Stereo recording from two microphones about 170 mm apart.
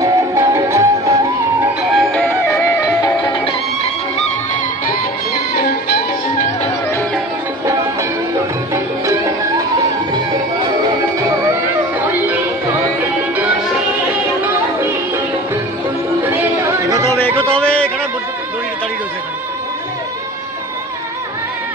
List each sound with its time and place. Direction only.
0.0 s music: 15° right (ahead or behind)
1.8 s music: centre (ahead or behind)
2.2 s music: 15° left (ahead or behind)
16.3 s music: 15° right (ahead or behind)
17.1 s a sound: 10° left (ahead or behind)